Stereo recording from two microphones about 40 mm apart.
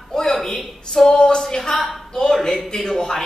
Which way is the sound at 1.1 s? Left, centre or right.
Left.